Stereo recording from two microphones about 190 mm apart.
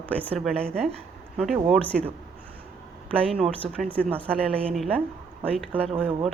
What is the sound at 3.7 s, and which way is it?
Speech, 5° left (ahead or behind).